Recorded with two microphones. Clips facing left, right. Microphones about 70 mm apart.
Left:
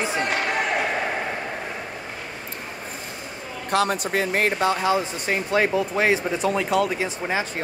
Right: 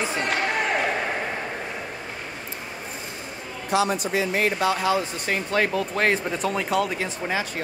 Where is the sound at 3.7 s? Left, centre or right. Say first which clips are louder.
Left 1 dB; left.